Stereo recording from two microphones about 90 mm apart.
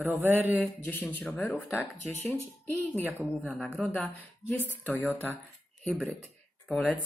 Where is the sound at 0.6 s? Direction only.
20° left (ahead or behind).